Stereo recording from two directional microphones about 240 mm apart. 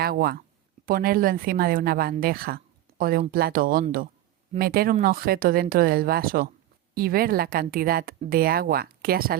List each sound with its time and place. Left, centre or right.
0.0 s a woman's voice: right